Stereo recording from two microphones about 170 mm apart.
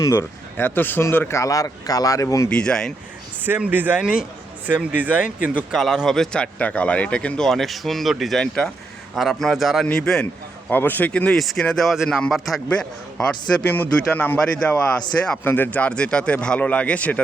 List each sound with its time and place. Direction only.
0.0 s speech: 20° left (ahead or behind)
2.5 s a man's voice: 5° left (ahead or behind)
3.4 s a man's voice: 10° right (ahead or behind); by 17.2 s 10° left (ahead or behind)